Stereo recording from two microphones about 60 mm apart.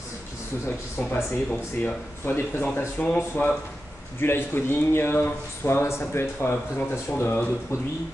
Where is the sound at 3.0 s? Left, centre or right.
Left.